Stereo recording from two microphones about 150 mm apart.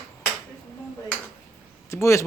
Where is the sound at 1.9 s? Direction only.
20° left (ahead or behind).